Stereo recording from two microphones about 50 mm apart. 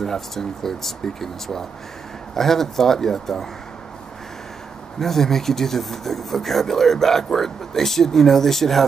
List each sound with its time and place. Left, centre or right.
0.0 s speech: centre
5.0 s speech: centre